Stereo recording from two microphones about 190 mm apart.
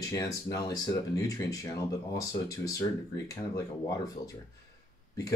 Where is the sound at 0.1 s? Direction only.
20° left (ahead or behind).